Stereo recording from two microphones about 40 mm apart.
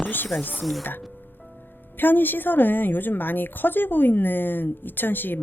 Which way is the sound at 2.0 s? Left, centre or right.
Left.